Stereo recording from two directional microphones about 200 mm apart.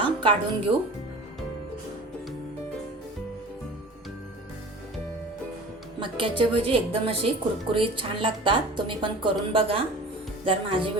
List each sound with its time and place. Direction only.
0.0 s speech: 25° right (ahead or behind)
6.0 s a woman's voice: 25° right (ahead or behind)